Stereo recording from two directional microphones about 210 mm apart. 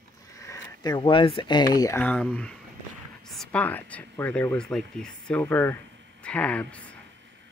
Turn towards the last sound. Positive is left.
turn(degrees=5)  # may be behind; listen again after turning